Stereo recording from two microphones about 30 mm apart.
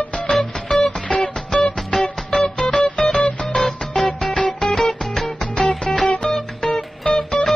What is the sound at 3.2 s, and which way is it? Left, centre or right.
Music, left.